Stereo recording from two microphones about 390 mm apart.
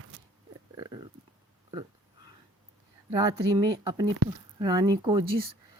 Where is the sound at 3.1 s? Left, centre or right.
Centre.